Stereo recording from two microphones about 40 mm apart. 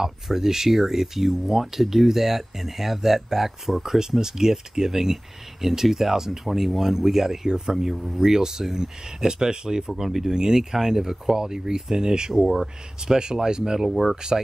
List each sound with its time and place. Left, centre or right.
0.0 s speech: centre
10.0 s speech: centre
10.3 s speech: centre